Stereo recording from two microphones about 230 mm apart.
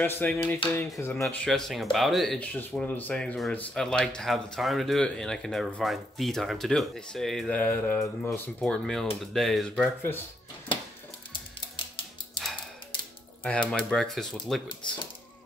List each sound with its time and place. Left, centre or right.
0.0 s speech: centre
11.3 s music: left
13.4 s speech: centre